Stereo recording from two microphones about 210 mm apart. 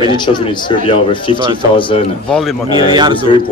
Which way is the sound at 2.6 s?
20° right (ahead or behind).